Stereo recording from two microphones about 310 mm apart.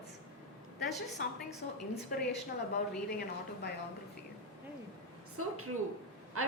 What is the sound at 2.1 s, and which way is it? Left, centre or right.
Speech, left.